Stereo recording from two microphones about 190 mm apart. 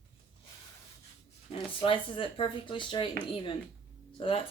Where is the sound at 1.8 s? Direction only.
30° left (ahead or behind).